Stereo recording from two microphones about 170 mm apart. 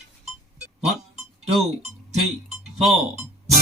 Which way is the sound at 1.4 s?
40° right (ahead or behind).